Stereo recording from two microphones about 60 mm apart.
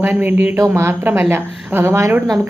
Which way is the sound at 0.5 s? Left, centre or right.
Right.